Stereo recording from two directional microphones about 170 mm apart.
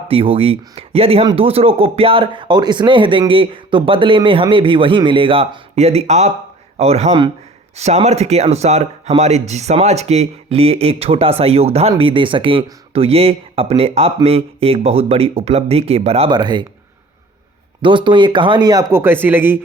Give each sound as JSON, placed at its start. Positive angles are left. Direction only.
{"t": 0.1, "sound": "speech", "side_deg": -35}
{"t": 17.8, "sound": "speech", "side_deg": -30}